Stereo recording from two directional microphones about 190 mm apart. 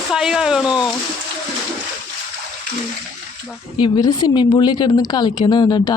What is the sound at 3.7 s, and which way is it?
A woman's voice, 25° left (ahead or behind).